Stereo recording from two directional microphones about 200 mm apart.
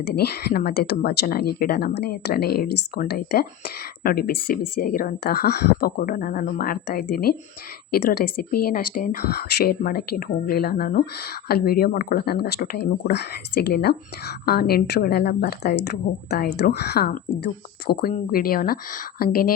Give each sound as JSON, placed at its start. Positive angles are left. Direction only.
{"t": 0.1, "sound": "speech", "side_deg": 55}